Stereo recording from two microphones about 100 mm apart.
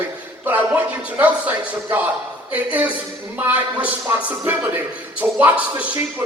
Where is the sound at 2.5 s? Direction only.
15° right (ahead or behind).